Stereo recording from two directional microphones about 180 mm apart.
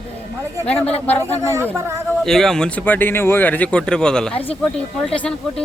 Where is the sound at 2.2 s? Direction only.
Centre (ahead or behind).